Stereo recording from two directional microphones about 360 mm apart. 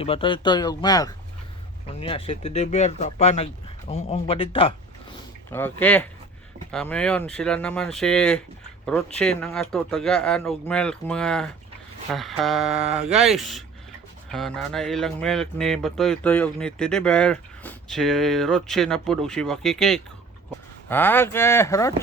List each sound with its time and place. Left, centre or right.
0.0 s speech: centre